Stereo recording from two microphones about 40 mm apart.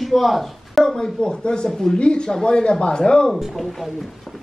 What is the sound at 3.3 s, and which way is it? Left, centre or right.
Speech, centre.